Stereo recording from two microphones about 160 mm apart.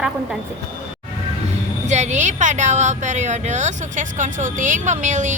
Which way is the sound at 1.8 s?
45° right (ahead or behind).